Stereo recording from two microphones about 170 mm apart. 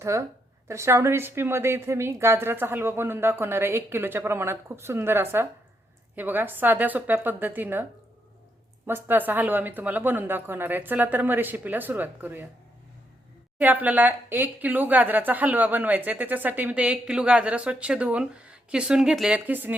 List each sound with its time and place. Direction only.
0.0 s speech: 15° right (ahead or behind)
8.9 s speech: 10° right (ahead or behind)
13.6 s speech: 10° right (ahead or behind)